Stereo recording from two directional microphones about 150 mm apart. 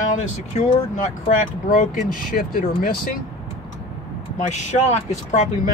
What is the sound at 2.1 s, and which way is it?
Speech, 70° left (ahead or behind).